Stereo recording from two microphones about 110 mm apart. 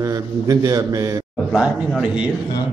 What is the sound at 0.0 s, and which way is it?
A man's voice, 30° right (ahead or behind).